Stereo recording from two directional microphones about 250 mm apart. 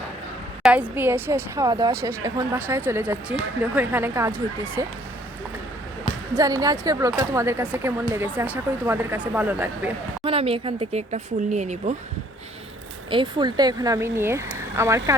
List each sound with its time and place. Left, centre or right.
0.6 s speech: centre
6.3 s speech: centre
10.2 s speech: right
13.1 s speech: centre